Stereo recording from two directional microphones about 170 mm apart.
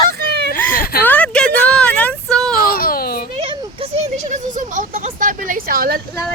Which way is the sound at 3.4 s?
35° right (ahead or behind).